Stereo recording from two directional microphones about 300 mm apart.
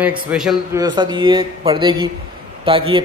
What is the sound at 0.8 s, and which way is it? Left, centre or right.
A man's voice, centre.